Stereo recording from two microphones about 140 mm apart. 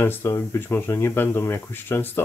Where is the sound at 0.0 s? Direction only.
15° left (ahead or behind).